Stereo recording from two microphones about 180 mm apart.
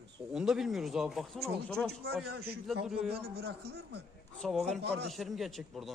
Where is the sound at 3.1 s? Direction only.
60° right (ahead or behind).